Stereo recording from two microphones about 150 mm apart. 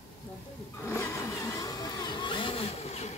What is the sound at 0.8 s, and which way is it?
Vehicle, 15° left (ahead or behind).